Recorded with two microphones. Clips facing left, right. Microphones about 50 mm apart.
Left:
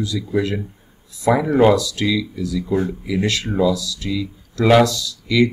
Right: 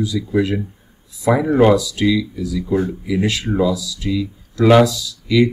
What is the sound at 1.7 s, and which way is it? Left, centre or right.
Speech, centre.